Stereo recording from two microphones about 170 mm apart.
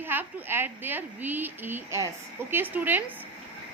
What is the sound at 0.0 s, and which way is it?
A woman's voice, 10° right (ahead or behind).